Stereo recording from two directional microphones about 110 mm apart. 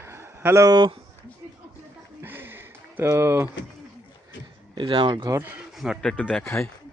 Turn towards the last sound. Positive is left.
turn(degrees=20)  # may be behind; listen again after turning